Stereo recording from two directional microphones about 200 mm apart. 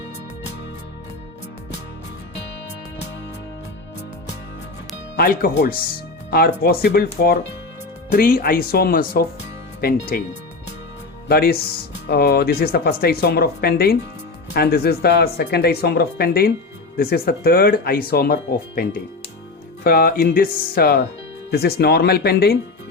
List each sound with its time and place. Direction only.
5.1 s speech: 45° left (ahead or behind)
11.3 s speech: 50° left (ahead or behind)